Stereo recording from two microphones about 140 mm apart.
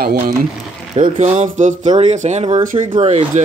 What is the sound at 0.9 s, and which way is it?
Speech, 55° right (ahead or behind).